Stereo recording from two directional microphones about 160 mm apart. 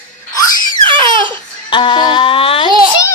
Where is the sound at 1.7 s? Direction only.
30° left (ahead or behind).